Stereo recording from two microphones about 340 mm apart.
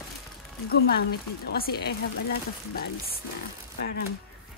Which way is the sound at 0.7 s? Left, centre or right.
Left.